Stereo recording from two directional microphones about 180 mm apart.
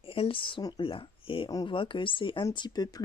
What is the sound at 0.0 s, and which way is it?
A woman's voice, 30° left (ahead or behind).